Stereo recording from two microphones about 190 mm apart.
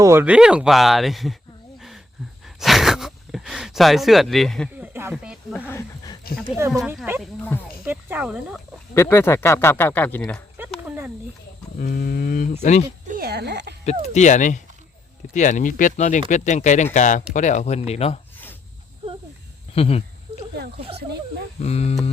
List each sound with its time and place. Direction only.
0.0 s speech: 10° right (ahead or behind)
2.6 s gasp: centre (ahead or behind)
4.7 s a sound: 10° right (ahead or behind)
5.1 s snake: 5° right (ahead or behind)
5.5 s speech: 10° left (ahead or behind)
6.6 s speech: 10° right (ahead or behind)
9.0 s speech: 15° left (ahead or behind)
10.8 s a sound: 10° right (ahead or behind)
11.8 s a sound: 45° left (ahead or behind)
13.1 s speech: 50° right (ahead or behind)
14.1 s speech: 40° left (ahead or behind)
19.7 s speech: 30° left (ahead or behind)
20.7 s speech: 30° right (ahead or behind)
21.6 s speech: 35° left (ahead or behind)